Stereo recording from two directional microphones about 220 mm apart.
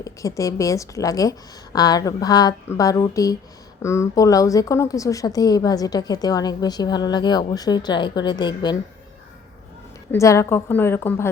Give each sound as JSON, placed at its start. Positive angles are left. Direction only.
{"t": 0.0, "sound": "a woman's voice", "side_deg": 15}
{"t": 10.1, "sound": "a woman's voice", "side_deg": 15}